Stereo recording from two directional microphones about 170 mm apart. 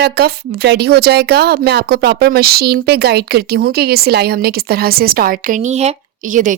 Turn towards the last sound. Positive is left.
turn(degrees=-50)  # may be behind; listen again after turning